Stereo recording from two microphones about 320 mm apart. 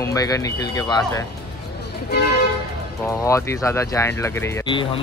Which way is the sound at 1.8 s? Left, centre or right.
Left.